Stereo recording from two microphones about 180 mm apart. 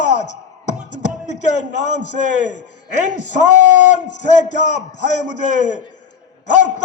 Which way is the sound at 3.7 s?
40° left (ahead or behind).